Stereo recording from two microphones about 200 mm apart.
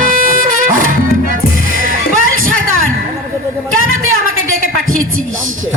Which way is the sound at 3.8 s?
90° right.